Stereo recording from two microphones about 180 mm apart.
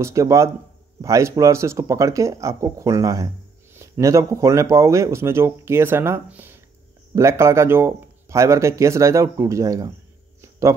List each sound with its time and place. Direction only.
0.0 s speech: 15° right (ahead or behind)